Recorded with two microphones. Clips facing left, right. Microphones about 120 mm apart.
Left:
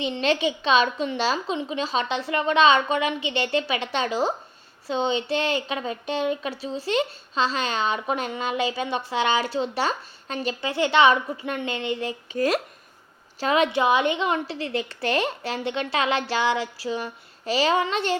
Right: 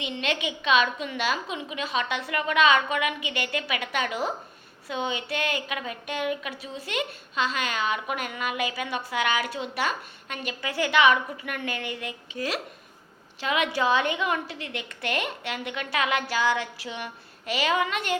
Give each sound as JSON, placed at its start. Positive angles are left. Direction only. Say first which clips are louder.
{"t": 0.0, "sound": "a woman's voice", "louder": "left 6 dB", "side_deg": 35}
{"t": 12.3, "sound": "a woman's voice", "louder": "left 8 dB", "side_deg": 45}
{"t": 13.7, "sound": "a woman's voice", "louder": "left 3 dB", "side_deg": 20}